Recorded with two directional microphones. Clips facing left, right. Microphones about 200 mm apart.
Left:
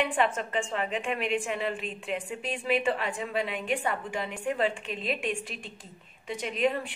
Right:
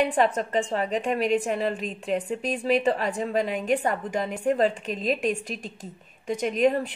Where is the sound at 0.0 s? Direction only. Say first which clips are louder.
Right 5 dB; 40° right (ahead or behind).